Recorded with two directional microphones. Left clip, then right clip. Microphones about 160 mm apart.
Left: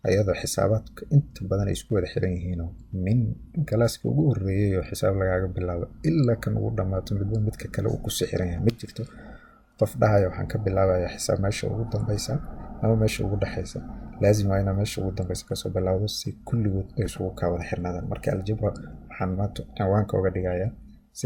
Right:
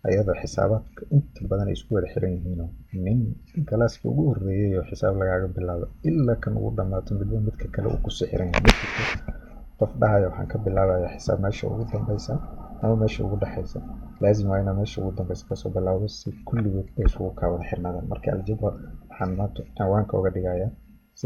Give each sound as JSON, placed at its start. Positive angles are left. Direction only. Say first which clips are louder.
{"t": 0.0, "sound": "speech", "louder": "even", "side_deg": 20}
{"t": 9.7, "sound": "speech", "louder": "right 1 dB", "side_deg": 25}